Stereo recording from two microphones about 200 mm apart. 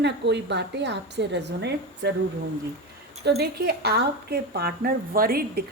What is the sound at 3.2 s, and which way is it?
A woman's voice, 55° right (ahead or behind).